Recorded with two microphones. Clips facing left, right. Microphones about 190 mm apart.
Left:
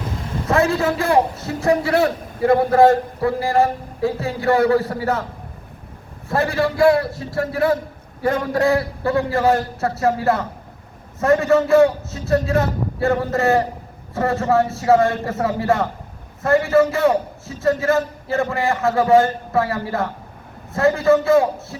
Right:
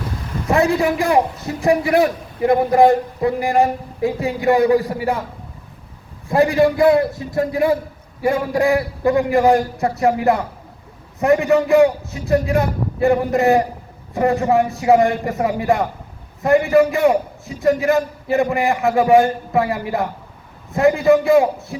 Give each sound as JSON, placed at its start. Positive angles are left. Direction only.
{"t": 0.4, "sound": "a man's voice", "side_deg": -15}
{"t": 6.2, "sound": "a man's voice", "side_deg": -15}